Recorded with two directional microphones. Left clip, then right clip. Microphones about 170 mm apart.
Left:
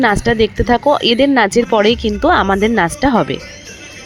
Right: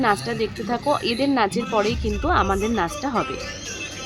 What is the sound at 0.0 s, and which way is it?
Speech, 45° left (ahead or behind).